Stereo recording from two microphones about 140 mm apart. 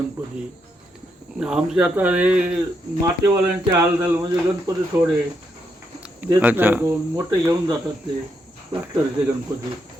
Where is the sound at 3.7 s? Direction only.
20° right (ahead or behind).